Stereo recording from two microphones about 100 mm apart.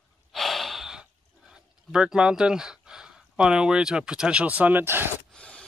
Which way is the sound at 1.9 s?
10° right (ahead or behind).